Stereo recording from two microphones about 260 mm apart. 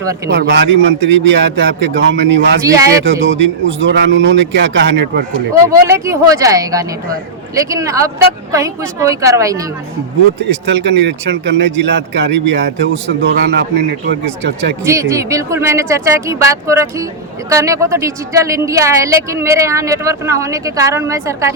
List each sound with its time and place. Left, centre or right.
0.3 s a man's voice: right
2.6 s a woman's voice: centre
3.0 s a man's voice: right
5.6 s a woman's voice: centre
10.7 s a man's voice: right
14.8 s a woman's voice: centre